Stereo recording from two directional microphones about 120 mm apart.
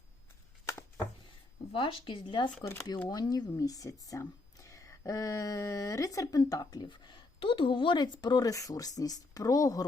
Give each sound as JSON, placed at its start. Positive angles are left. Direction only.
{"t": 0.6, "sound": "a sound", "side_deg": 25}
{"t": 1.7, "sound": "speech", "side_deg": 45}
{"t": 3.1, "sound": "speech", "side_deg": 35}